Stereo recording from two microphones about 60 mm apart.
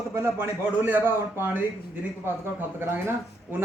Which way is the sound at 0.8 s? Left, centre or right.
Right.